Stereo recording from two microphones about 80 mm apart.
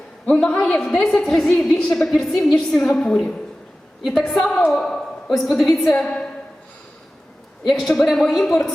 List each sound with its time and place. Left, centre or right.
0.3 s a man's voice: centre
7.7 s a woman's voice: centre